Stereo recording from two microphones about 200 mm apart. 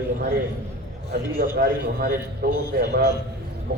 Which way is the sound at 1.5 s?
50° right (ahead or behind).